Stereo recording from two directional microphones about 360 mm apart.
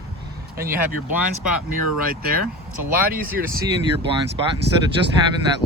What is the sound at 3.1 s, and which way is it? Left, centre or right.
Speech, right.